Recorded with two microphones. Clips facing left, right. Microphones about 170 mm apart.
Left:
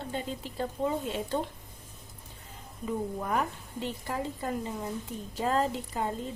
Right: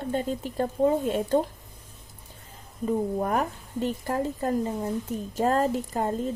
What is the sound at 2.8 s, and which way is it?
A woman's voice, 45° right (ahead or behind).